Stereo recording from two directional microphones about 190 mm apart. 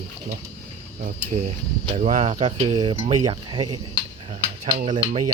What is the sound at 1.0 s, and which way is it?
Speech, 40° right (ahead or behind).